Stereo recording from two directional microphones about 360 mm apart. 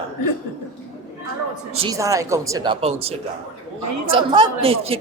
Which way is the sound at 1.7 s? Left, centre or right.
Centre.